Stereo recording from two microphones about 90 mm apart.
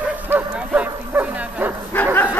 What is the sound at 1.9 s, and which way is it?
Bow-wow, 20° left (ahead or behind).